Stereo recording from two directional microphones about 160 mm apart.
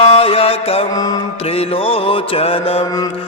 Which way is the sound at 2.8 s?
25° left (ahead or behind).